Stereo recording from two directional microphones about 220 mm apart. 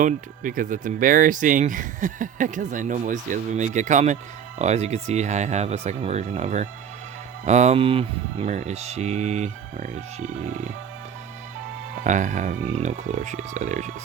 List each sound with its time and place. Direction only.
0.0 s speech: 35° right (ahead or behind)
12.0 s speech: 35° right (ahead or behind)